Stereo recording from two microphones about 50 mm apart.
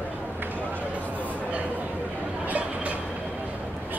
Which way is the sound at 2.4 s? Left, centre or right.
Right.